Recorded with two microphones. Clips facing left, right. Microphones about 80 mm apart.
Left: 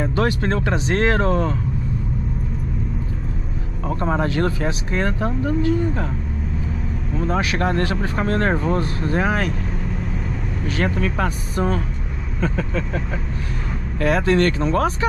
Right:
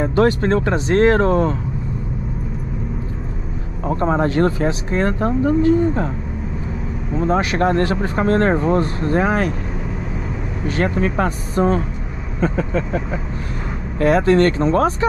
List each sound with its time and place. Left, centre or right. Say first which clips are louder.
0.0 s speech: right 5 dB; right
3.8 s speech: right 4 dB; right
7.2 s speech: right 4 dB; right
10.8 s speech: right 3 dB; right
13.9 s speech: right 4 dB; right